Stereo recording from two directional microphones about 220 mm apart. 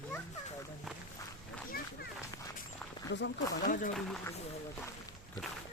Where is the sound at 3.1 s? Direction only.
50° left (ahead or behind).